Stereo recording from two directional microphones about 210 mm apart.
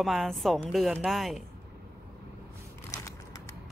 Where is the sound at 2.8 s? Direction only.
15° left (ahead or behind).